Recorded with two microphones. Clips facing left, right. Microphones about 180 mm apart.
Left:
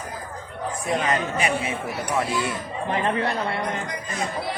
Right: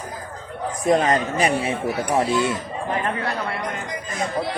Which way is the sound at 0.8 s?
35° right (ahead or behind).